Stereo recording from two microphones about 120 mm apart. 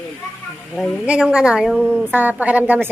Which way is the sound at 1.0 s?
10° right (ahead or behind).